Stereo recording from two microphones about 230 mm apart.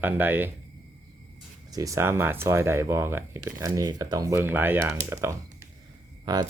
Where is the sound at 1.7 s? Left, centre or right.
Centre.